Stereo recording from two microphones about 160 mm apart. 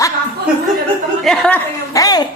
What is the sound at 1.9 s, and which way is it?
Speech, 25° left (ahead or behind).